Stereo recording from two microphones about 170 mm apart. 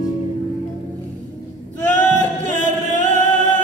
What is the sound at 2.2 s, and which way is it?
Music, 45° right (ahead or behind).